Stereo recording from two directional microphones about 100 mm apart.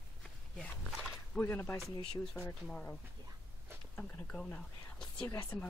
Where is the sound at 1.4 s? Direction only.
25° left (ahead or behind).